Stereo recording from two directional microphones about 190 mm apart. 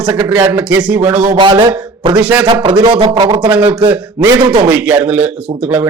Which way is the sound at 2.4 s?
25° right (ahead or behind).